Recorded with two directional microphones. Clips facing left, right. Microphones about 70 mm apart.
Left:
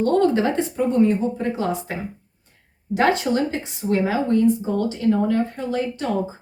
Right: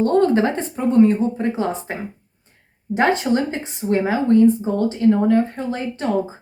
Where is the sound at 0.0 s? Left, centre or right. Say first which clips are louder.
Right 2 dB; right.